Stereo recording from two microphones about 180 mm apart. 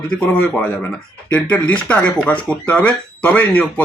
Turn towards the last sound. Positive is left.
turn(degrees=10)  # may be behind; listen again after turning